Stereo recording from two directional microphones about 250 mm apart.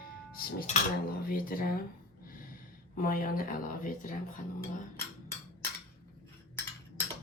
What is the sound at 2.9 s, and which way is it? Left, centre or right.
Speech, left.